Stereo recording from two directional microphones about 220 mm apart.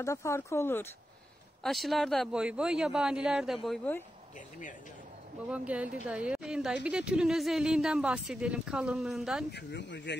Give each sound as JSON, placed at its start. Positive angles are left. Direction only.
{"t": 0.0, "sound": "speech", "side_deg": 15}
{"t": 1.6, "sound": "a woman's voice", "side_deg": 0}
{"t": 5.5, "sound": "a woman's voice", "side_deg": -5}
{"t": 9.5, "sound": "speech", "side_deg": 50}